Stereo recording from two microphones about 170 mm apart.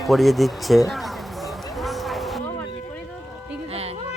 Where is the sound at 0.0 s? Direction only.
Centre (ahead or behind).